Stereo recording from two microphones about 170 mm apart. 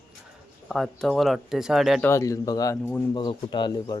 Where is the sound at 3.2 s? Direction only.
30° left (ahead or behind).